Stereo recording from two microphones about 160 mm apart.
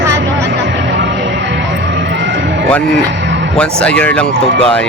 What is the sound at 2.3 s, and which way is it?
Music, 90° right.